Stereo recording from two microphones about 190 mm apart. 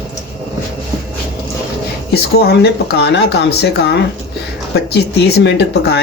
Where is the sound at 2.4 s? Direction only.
55° left (ahead or behind).